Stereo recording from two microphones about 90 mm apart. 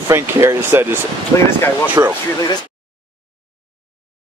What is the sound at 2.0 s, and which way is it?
Speech, 40° right (ahead or behind).